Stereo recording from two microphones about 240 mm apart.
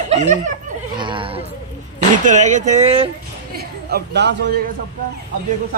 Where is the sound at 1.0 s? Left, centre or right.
Centre.